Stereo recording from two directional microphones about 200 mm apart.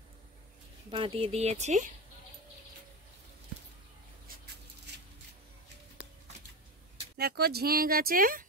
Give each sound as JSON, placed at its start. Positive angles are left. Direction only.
{"t": 0.8, "sound": "speech", "side_deg": -25}
{"t": 7.2, "sound": "speech", "side_deg": -50}